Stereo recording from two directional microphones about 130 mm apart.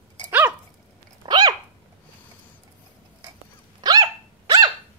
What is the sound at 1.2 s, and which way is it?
Dog, 30° right (ahead or behind).